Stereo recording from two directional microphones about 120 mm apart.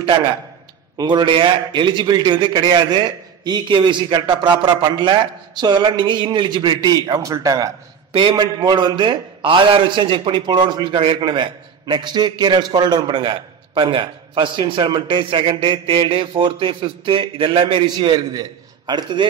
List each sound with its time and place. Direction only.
0.9 s a man's voice: 40° right (ahead or behind)
8.1 s a man's voice: 45° right (ahead or behind)